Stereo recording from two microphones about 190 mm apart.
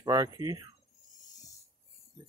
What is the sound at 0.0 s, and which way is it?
Speech, 20° right (ahead or behind).